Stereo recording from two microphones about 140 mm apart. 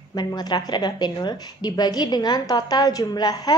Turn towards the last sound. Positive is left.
turn(degrees=30)  # may be behind; listen again after turning